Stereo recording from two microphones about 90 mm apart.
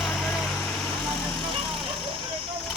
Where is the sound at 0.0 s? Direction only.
Centre (ahead or behind).